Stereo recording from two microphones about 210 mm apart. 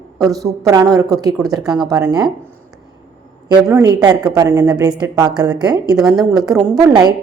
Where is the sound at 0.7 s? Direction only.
20° right (ahead or behind).